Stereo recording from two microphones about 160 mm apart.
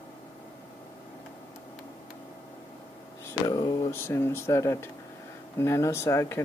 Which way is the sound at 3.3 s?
25° left (ahead or behind).